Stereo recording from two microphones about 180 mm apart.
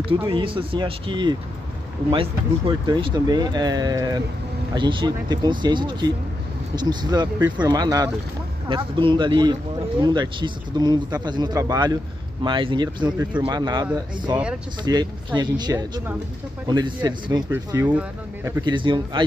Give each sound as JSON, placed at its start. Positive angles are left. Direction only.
{"t": 0.3, "sound": "speech", "side_deg": -30}
{"t": 2.9, "sound": "speech", "side_deg": -25}
{"t": 18.6, "sound": "speech", "side_deg": -25}